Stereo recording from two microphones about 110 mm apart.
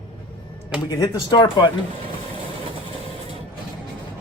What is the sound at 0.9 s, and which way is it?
Speech, 35° left (ahead or behind).